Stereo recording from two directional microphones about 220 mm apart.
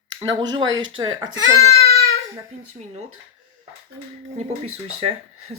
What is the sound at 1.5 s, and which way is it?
Speech, 15° left (ahead or behind).